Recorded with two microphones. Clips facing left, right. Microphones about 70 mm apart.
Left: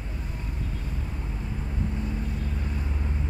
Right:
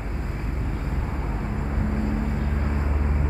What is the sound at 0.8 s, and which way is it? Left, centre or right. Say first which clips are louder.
Vehicle: right 6 dB; right.